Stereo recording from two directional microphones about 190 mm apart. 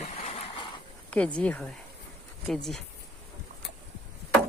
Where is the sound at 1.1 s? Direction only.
5° left (ahead or behind).